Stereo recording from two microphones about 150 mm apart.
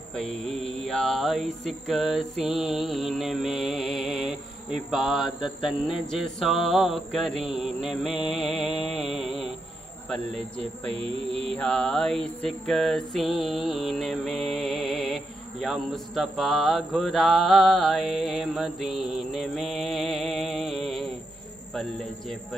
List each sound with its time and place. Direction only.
0.1 s speech: 5° left (ahead or behind)
10.9 s music: 40° right (ahead or behind)
11.4 s speech: 5° left (ahead or behind)